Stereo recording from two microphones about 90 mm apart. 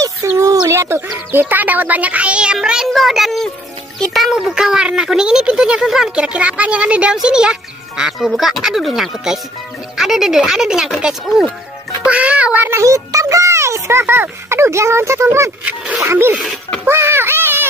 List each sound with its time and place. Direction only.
0.0 s a sound: 40° right (ahead or behind)
0.7 s speech: 30° right (ahead or behind); by 12.6 s 15° right (ahead or behind)
12.6 s a child's voice: 35° right (ahead or behind)
16.0 s wild animals: 30° right (ahead or behind)
16.8 s speech: 30° right (ahead or behind)